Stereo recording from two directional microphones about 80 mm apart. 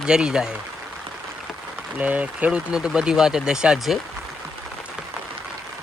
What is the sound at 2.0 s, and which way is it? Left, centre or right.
Speech, centre.